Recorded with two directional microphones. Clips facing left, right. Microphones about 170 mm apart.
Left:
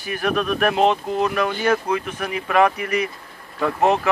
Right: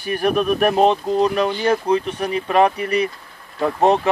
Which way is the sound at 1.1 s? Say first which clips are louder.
Right 3 dB; 30° right (ahead or behind).